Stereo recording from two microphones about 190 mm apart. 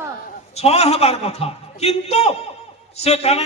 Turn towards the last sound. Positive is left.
turn(degrees=35)  # may be behind; listen again after turning